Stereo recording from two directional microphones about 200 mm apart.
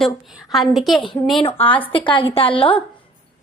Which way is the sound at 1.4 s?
30° left (ahead or behind).